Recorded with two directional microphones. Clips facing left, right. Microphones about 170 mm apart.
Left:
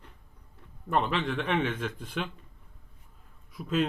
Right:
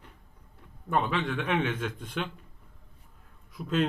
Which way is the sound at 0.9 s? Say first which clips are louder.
Even; centre (ahead or behind).